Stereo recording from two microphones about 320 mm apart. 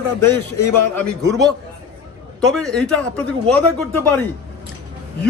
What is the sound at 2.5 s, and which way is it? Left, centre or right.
A man's voice, centre.